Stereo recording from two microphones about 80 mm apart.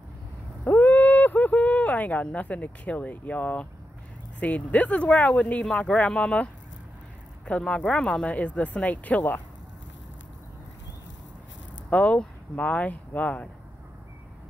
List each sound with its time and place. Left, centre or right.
0.7 s a sound: left
4.4 s speech: centre
11.9 s speech: centre